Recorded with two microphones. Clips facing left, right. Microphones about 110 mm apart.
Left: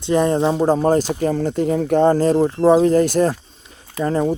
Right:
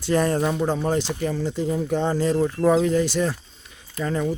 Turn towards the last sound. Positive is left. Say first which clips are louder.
# left 6 dB
turn(degrees=40)  # may be behind; listen again after turning